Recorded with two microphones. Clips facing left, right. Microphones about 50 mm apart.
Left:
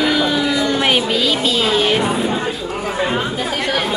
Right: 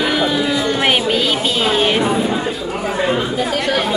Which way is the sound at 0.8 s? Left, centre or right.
Right.